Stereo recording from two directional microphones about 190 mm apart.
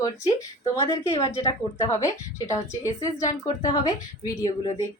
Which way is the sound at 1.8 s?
15° left (ahead or behind).